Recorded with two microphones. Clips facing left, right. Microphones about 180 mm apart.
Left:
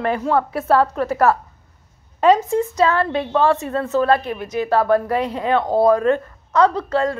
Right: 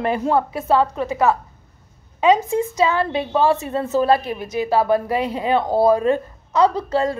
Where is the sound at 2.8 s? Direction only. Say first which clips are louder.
Left 1 dB; 5° right (ahead or behind).